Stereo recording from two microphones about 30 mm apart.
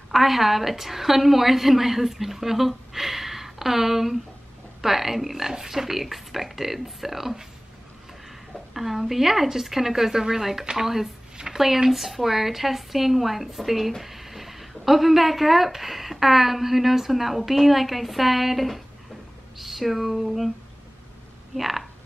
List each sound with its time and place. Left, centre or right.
0.1 s a woman's voice: centre
8.7 s a woman's voice: centre
21.5 s speech: centre